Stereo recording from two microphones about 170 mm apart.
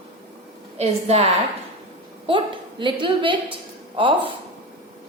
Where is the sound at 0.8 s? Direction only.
40° right (ahead or behind).